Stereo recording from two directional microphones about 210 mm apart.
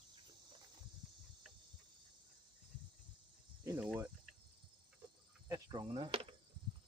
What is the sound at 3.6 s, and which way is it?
Cricket, 15° right (ahead or behind).